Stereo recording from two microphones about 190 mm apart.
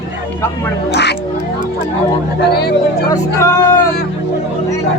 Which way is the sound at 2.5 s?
55° left (ahead or behind).